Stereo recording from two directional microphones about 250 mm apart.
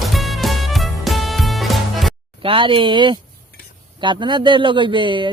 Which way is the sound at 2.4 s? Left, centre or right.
Right.